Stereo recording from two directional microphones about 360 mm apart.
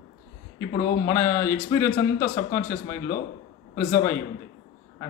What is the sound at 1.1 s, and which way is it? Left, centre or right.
A man's voice, centre.